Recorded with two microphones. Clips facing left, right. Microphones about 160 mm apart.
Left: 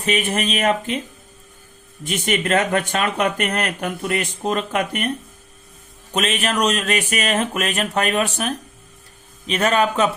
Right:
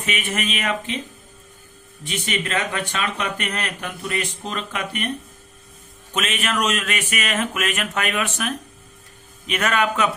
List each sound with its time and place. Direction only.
0.0 s speech: 35° left (ahead or behind)
2.0 s speech: 45° left (ahead or behind)
6.1 s speech: 35° left (ahead or behind)